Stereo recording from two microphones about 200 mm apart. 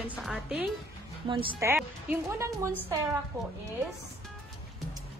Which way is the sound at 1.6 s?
15° right (ahead or behind).